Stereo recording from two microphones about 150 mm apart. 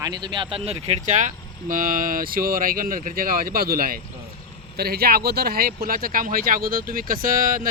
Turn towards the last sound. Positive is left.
turn(degrees=-70)  # may be behind; listen again after turning